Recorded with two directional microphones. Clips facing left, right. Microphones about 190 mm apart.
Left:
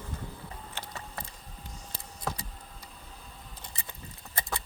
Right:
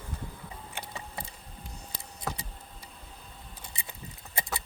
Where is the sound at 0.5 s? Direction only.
15° right (ahead or behind).